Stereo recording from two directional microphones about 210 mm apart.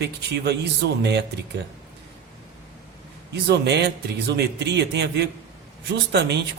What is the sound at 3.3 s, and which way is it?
A man's voice, 55° right (ahead or behind).